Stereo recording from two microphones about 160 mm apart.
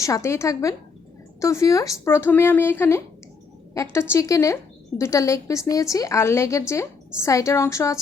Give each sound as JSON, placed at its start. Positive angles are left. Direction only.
{"t": 0.0, "sound": "a woman's voice", "side_deg": 20}